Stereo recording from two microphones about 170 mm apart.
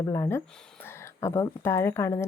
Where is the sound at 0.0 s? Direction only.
15° left (ahead or behind).